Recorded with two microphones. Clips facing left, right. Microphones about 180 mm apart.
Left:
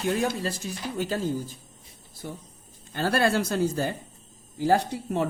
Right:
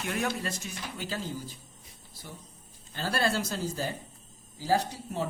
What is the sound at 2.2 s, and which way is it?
Speech, 50° left (ahead or behind).